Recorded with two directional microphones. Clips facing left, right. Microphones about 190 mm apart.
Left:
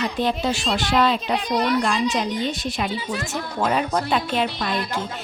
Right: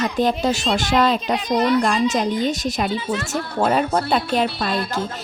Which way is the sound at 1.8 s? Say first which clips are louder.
Right 3 dB; 45° right (ahead or behind).